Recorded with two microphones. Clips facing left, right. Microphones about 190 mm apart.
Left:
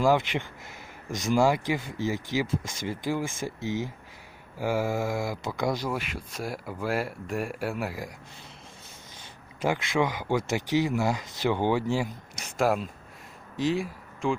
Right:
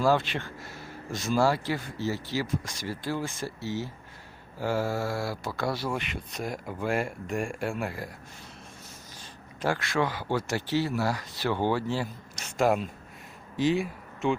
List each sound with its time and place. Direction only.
0.0 s speech: 15° left (ahead or behind)
6.0 s speech: centre (ahead or behind)
9.6 s speech: 15° left (ahead or behind)
12.5 s speech: centre (ahead or behind)